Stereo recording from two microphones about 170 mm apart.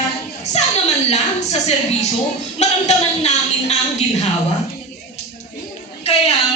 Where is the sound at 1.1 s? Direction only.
40° left (ahead or behind).